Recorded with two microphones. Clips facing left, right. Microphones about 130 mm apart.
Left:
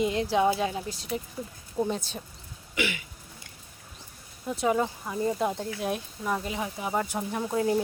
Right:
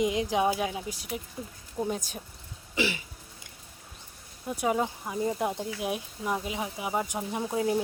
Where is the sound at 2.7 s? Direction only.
30° right (ahead or behind).